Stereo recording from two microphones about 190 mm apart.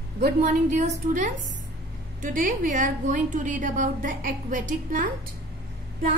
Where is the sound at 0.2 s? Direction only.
45° right (ahead or behind).